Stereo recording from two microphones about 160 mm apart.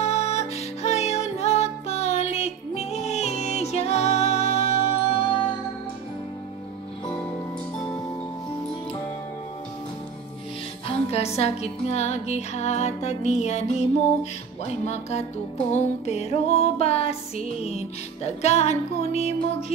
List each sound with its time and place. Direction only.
0.0 s music: 40° left (ahead or behind)
10.9 s music: 40° left (ahead or behind)